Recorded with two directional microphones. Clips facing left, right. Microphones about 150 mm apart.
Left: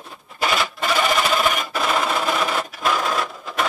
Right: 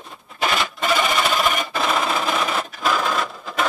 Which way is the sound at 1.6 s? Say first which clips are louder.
Even; centre (ahead or behind).